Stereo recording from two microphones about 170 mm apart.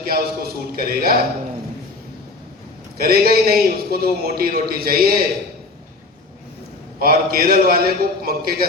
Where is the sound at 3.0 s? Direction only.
60° right (ahead or behind).